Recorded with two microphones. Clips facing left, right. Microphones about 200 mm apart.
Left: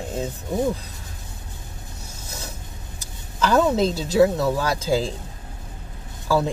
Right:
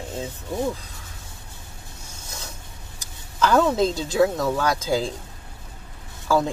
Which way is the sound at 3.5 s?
15° left (ahead or behind).